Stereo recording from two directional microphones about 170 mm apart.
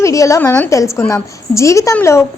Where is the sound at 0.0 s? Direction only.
20° left (ahead or behind).